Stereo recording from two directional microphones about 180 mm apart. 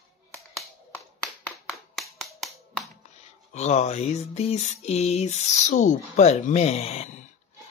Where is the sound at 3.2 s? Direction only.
40° left (ahead or behind).